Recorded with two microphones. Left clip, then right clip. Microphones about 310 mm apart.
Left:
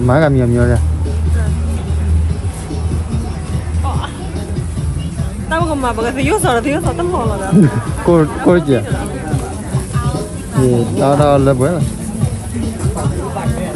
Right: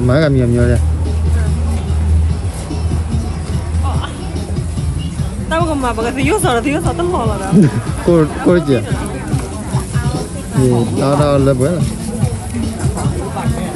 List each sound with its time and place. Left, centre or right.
0.1 s speech: centre
5.5 s speech: centre
10.0 s speech: centre